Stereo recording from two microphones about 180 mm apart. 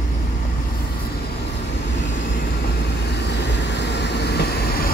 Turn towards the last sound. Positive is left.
turn(degrees=65)  # may be behind; listen again after turning